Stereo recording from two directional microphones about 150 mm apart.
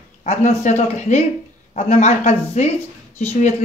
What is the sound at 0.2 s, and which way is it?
Speech, 50° left (ahead or behind).